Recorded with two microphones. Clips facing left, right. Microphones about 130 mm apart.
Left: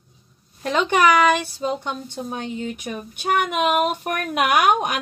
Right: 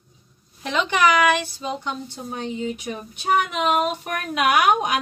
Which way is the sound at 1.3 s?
50° left (ahead or behind).